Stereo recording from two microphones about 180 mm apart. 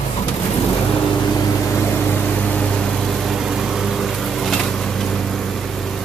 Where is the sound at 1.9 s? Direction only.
10° left (ahead or behind).